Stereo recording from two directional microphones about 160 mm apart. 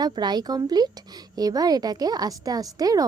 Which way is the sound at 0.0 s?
25° right (ahead or behind).